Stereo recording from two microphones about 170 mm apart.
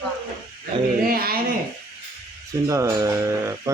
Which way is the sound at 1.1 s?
60° right (ahead or behind).